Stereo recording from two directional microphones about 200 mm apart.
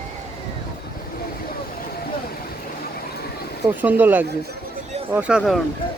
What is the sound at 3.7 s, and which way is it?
Speech, 10° right (ahead or behind).